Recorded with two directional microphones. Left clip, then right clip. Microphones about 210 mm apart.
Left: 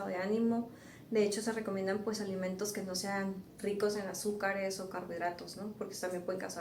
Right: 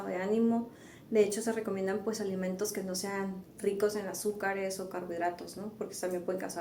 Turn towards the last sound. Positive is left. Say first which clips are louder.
# right 3 dB
turn(degrees=-40)  # may be behind; listen again after turning